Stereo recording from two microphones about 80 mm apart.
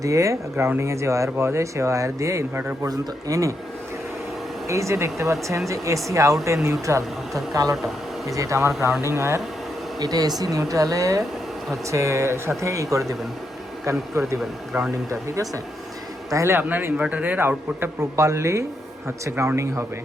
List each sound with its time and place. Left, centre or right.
0.0 s speech: right
4.7 s speech: right
7.9 s speech: centre
8.4 s speech: right
10.0 s speech: right
14.2 s speech: right
16.6 s speech: right
17.7 s speech: right